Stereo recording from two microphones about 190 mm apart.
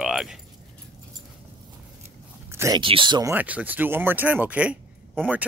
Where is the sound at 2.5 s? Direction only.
15° right (ahead or behind).